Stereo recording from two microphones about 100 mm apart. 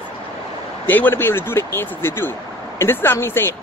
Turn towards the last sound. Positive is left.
turn(degrees=25)  # may be behind; listen again after turning